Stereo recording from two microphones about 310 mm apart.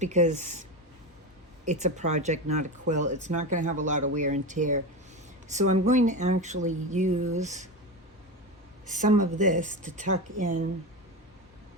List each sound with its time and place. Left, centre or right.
0.0 s speech: right
1.6 s speech: right
5.8 s speech: right
8.9 s speech: right